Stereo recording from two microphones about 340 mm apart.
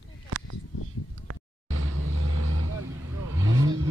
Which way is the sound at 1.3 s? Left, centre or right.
Right.